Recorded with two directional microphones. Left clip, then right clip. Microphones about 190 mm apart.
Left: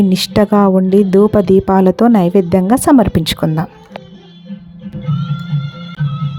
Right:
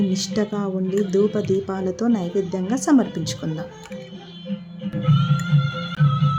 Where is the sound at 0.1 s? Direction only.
45° left (ahead or behind).